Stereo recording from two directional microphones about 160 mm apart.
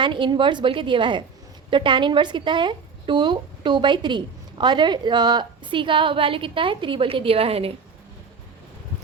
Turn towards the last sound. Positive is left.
turn(degrees=-35)  # may be behind; listen again after turning